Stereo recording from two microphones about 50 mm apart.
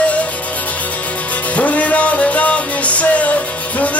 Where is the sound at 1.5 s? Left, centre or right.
Left.